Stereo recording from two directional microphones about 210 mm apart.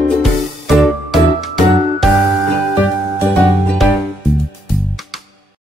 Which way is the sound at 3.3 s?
Centre (ahead or behind).